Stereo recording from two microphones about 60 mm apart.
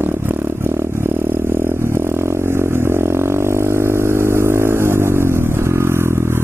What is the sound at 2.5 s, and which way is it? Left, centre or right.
Vehicle, right.